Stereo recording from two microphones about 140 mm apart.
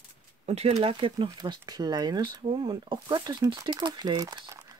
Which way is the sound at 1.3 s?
30° right (ahead or behind).